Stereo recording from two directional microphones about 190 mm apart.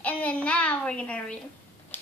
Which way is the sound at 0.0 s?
5° left (ahead or behind).